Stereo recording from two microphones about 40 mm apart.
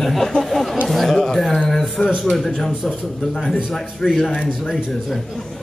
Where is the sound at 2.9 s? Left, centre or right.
Centre.